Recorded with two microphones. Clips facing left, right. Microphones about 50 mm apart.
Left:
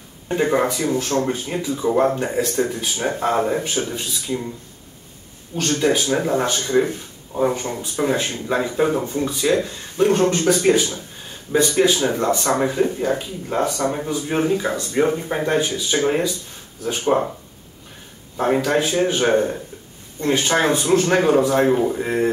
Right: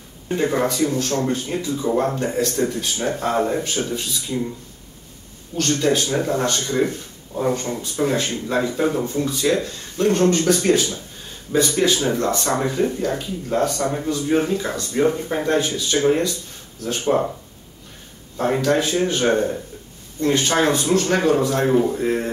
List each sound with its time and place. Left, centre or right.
0.4 s speech: centre
5.6 s speech: centre
18.3 s speech: centre